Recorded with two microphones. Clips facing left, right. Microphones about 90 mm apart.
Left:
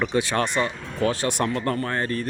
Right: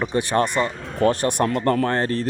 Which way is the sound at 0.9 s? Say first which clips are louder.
Right 5 dB; 55° right (ahead or behind).